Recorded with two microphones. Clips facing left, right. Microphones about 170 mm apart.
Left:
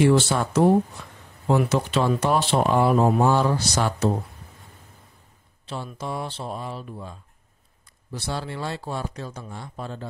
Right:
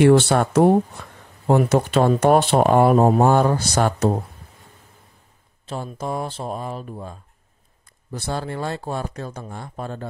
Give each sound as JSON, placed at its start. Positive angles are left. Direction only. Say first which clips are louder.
{"t": 0.0, "sound": "speech", "louder": "right 5 dB", "side_deg": -60}
{"t": 5.7, "sound": "speech", "louder": "right 4 dB", "side_deg": -45}